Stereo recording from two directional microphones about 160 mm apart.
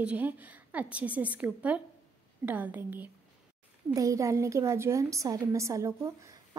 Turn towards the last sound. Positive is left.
turn(degrees=-20)  # may be behind; listen again after turning